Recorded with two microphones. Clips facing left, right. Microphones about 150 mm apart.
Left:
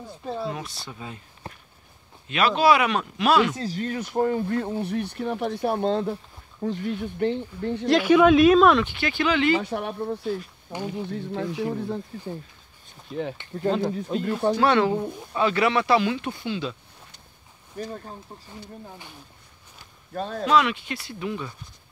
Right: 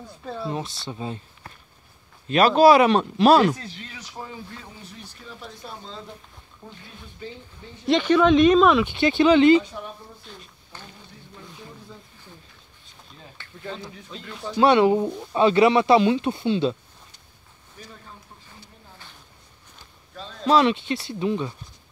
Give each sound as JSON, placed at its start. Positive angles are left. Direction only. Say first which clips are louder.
{"t": 0.5, "sound": "speech", "louder": "right 3 dB", "side_deg": -25}
{"t": 2.2, "sound": "speech", "louder": "right 5 dB", "side_deg": -40}
{"t": 3.5, "sound": "speech", "louder": "left 12 dB", "side_deg": 40}
{"t": 6.6, "sound": "speech", "louder": "left 17 dB", "side_deg": 75}
{"t": 7.8, "sound": "speech", "louder": "left 1 dB", "side_deg": 5}
{"t": 8.8, "sound": "speech", "louder": "right 7 dB", "side_deg": -25}
{"t": 9.6, "sound": "speech", "louder": "left 3 dB", "side_deg": 65}
{"t": 13.7, "sound": "speech", "louder": "left 12 dB", "side_deg": 60}
{"t": 13.9, "sound": "speech", "louder": "left 13 dB", "side_deg": 50}
{"t": 14.6, "sound": "speech", "louder": "right 8 dB", "side_deg": -20}
{"t": 17.7, "sound": "speech", "louder": "left 11 dB", "side_deg": 45}
{"t": 20.2, "sound": "speech", "louder": "left 10 dB", "side_deg": 55}
{"t": 20.4, "sound": "speech", "louder": "right 3 dB", "side_deg": -30}